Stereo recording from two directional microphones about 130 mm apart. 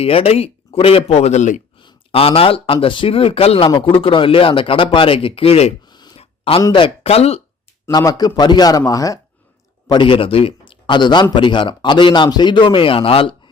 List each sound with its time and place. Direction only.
0.0 s speech: 50° left (ahead or behind); by 1.6 s 70° left (ahead or behind)
1.8 s speech: 45° left (ahead or behind)
5.9 s a sound: 35° left (ahead or behind)
6.1 s a sound: 45° left (ahead or behind)
6.6 s speech: 35° left (ahead or behind)
7.9 s a man's voice: 30° left (ahead or behind)
9.8 s speech: 35° left (ahead or behind)